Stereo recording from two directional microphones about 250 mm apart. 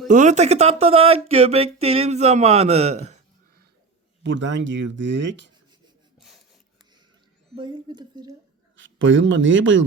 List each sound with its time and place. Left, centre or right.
0.1 s speech: right
4.2 s speech: right
6.1 s a sound: centre
7.5 s speech: centre
8.7 s speech: right